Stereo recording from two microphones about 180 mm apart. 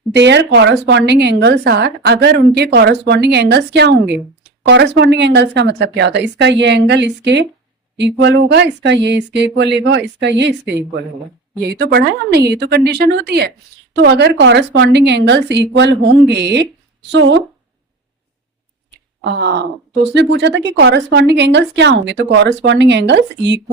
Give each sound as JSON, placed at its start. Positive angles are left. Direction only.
{"t": 0.1, "sound": "a woman's voice", "side_deg": -75}
{"t": 17.1, "sound": "speech", "side_deg": -85}
{"t": 18.9, "sound": "a sound", "side_deg": -75}
{"t": 20.1, "sound": "a woman's voice", "side_deg": -75}